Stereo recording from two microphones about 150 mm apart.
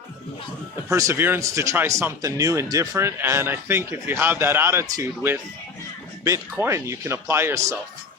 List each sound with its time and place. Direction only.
0.9 s speech: 20° right (ahead or behind)